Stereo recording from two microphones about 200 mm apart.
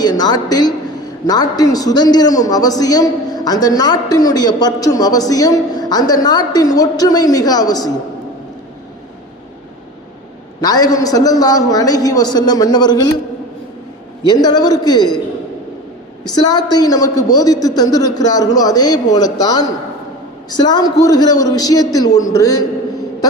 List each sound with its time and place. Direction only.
0.0 s a man's voice: 20° left (ahead or behind)
10.6 s a man's voice: 20° left (ahead or behind)
14.3 s a man's voice: 20° left (ahead or behind)
16.3 s a man's voice: 20° left (ahead or behind)